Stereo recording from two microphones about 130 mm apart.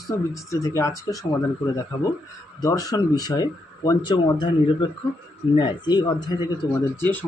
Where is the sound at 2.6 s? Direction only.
25° left (ahead or behind).